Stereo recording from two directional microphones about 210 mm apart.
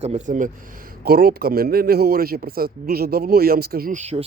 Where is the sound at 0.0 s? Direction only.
35° right (ahead or behind).